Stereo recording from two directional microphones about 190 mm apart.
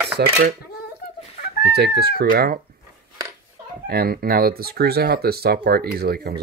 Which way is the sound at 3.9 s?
50° right (ahead or behind).